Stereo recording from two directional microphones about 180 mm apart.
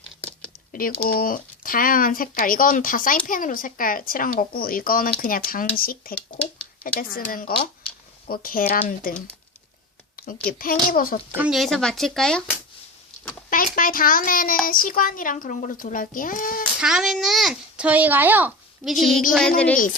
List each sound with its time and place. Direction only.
0.2 s a sound: 5° left (ahead or behind)
0.7 s speech: 50° left (ahead or behind)
10.2 s a sound: 55° left (ahead or behind)
10.6 s speech: 55° left (ahead or behind)
11.3 s speech: 10° right (ahead or behind)
11.5 s a child's voice: centre (ahead or behind)
13.5 s speech: 50° left (ahead or behind)
16.8 s a child's voice: 5° right (ahead or behind)
18.9 s a child's voice: centre (ahead or behind)